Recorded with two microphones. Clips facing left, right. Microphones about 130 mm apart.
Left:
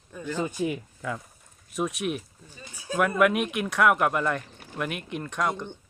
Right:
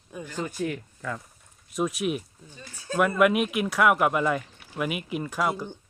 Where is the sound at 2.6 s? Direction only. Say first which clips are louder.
Even; 10° left (ahead or behind).